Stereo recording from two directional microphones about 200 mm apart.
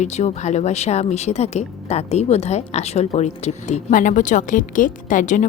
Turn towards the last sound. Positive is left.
turn(degrees=40)  # may be behind; listen again after turning